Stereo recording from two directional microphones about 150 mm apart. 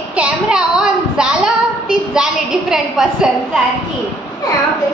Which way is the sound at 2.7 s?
5° right (ahead or behind).